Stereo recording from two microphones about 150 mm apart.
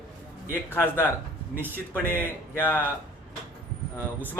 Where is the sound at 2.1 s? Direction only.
15° left (ahead or behind).